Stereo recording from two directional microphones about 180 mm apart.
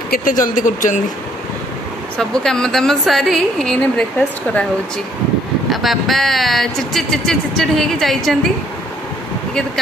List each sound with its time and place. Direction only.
0.1 s speech: 50° left (ahead or behind)
2.1 s speech: 5° left (ahead or behind)
5.7 s speech: centre (ahead or behind)